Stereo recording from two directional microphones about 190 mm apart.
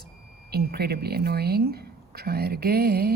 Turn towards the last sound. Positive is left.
turn(degrees=-55)  # may be behind; listen again after turning